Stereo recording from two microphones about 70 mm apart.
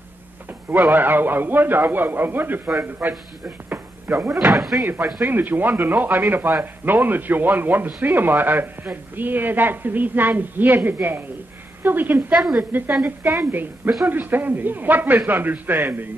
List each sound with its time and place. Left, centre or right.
0.5 s a man's voice: right
4.5 s speech: centre
5.2 s a man's voice: right
12.4 s a woman's voice: centre
13.5 s a man's voice: right